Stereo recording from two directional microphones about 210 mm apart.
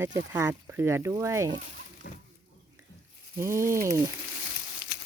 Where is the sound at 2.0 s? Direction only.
50° left (ahead or behind).